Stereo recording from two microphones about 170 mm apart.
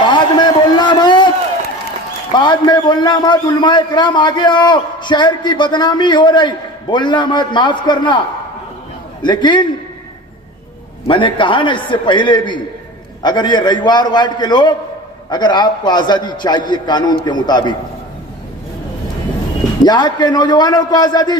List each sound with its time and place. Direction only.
0.0 s a sound: 25° left (ahead or behind)
2.3 s a man's voice: 25° left (ahead or behind)
9.2 s a man's voice: 25° left (ahead or behind)
11.1 s a man's voice: 30° left (ahead or behind)
19.8 s a man's voice: 25° left (ahead or behind)